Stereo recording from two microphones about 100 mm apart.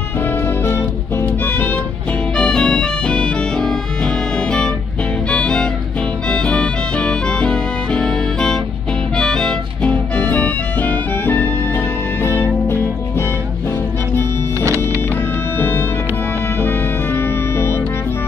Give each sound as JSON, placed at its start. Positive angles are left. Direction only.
{"t": 0.7, "sound": "music", "side_deg": 25}
{"t": 2.3, "sound": "music", "side_deg": 5}
{"t": 16.6, "sound": "music", "side_deg": 25}